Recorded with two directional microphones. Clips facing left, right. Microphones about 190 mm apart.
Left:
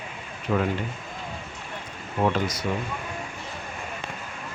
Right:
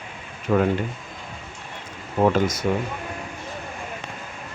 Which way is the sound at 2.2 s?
45° right (ahead or behind).